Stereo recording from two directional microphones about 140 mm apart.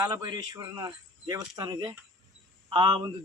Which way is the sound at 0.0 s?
25° right (ahead or behind).